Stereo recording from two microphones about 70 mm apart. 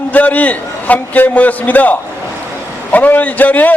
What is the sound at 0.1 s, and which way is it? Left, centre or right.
A man's voice, left.